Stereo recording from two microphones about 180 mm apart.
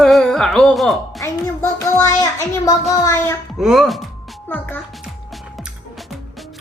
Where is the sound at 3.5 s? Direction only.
Centre (ahead or behind).